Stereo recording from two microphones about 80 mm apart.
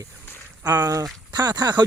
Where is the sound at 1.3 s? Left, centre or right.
Right.